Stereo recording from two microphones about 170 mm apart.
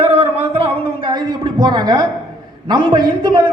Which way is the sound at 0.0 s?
35° right (ahead or behind).